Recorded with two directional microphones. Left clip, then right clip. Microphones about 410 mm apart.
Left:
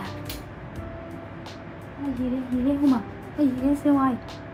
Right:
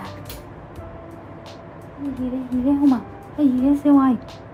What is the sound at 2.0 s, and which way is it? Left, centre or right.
A woman's voice, centre.